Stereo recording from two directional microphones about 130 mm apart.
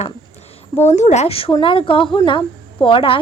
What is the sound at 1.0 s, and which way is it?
A woman's voice, 60° left (ahead or behind).